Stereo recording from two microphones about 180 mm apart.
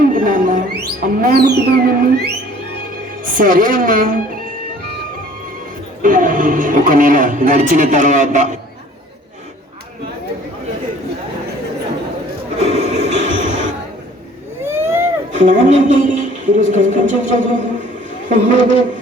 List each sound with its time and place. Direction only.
0.0 s music: 50° right (ahead or behind)
3.3 s speech: 50° right (ahead or behind)
6.0 s speech: 50° right (ahead or behind)
12.5 s music: 40° right (ahead or behind)
14.6 s vehicle: 15° right (ahead or behind)
15.3 s a woman's voice: 45° right (ahead or behind)